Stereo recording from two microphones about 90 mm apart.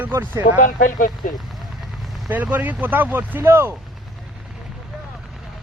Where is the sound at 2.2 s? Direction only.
20° right (ahead or behind).